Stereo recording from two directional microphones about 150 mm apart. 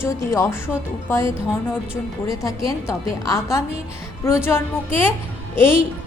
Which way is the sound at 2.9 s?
20° left (ahead or behind).